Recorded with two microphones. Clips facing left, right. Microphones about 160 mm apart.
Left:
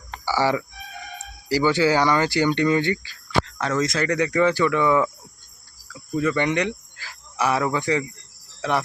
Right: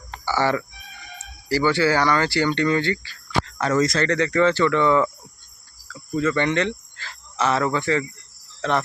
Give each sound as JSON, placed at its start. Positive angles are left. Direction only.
{"t": 0.3, "sound": "speech", "side_deg": 10}
{"t": 3.4, "sound": "speech", "side_deg": 0}
{"t": 5.9, "sound": "cricket", "side_deg": 15}
{"t": 8.6, "sound": "speech", "side_deg": 10}